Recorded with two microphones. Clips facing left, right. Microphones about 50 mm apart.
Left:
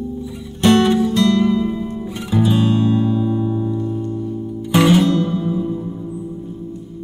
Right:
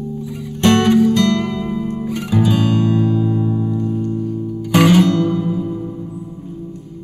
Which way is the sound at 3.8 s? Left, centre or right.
Centre.